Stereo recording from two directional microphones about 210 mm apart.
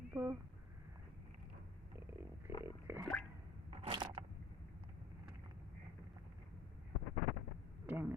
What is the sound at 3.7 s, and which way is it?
Crushing, 25° right (ahead or behind).